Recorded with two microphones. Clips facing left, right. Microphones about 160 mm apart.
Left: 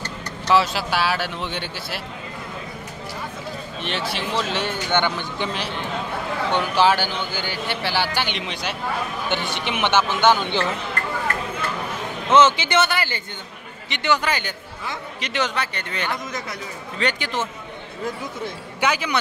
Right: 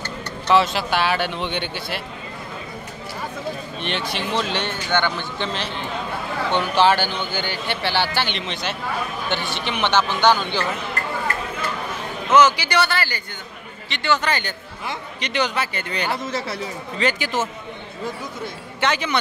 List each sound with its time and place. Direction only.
0.5 s speech: 5° left (ahead or behind)
3.8 s speech: 5° left (ahead or behind)
4.8 s a man's voice: 15° left (ahead or behind)
12.3 s a man's voice: 25° left (ahead or behind); by 16.1 s centre (ahead or behind)
16.1 s speech: 30° right (ahead or behind)
17.0 s speech: 5° right (ahead or behind)
18.8 s speech: 5° left (ahead or behind)